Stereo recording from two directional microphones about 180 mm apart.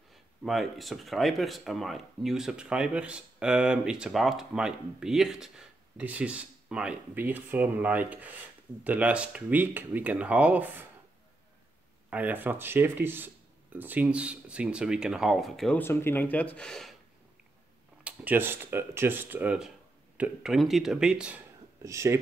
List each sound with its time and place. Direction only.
0.1 s speech: centre (ahead or behind)
12.1 s speech: 10° right (ahead or behind)
15.8 s speech: 15° left (ahead or behind)
18.0 s speech: 10° right (ahead or behind)
21.8 s speech: 15° right (ahead or behind)